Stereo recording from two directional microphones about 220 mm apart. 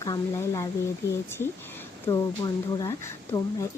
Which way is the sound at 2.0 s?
15° left (ahead or behind).